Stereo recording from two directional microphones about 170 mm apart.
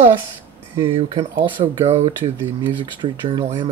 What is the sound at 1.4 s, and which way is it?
Speech, 30° right (ahead or behind).